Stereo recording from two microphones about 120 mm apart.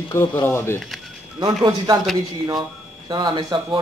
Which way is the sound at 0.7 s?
Centre (ahead or behind).